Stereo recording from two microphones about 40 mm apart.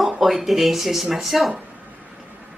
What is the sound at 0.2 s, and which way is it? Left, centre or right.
A woman's voice, centre.